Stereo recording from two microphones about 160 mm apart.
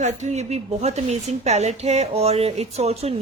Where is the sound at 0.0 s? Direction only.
45° right (ahead or behind).